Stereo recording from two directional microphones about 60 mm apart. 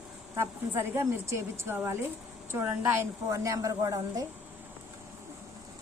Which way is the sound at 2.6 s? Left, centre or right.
Right.